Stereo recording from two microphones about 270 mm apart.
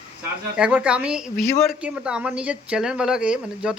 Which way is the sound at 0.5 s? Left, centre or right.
Centre.